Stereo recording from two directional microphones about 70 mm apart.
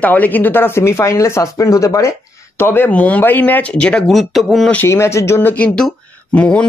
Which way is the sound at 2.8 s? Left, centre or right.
Left.